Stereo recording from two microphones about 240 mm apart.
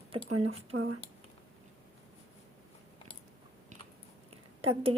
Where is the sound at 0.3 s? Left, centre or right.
Right.